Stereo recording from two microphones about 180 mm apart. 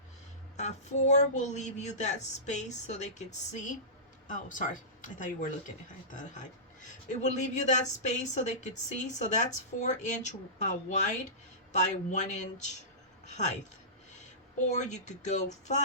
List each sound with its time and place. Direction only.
0.5 s speech: 40° left (ahead or behind)
7.1 s speech: 40° left (ahead or behind)
14.7 s speech: 40° left (ahead or behind)